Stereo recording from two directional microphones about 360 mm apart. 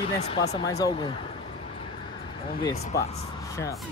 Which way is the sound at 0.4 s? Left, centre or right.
Left.